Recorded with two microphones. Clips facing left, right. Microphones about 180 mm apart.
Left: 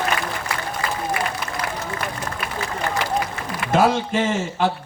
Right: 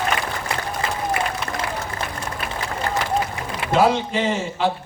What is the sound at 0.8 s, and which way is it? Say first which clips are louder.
Applause: left 1 dB; 25° right (ahead or behind).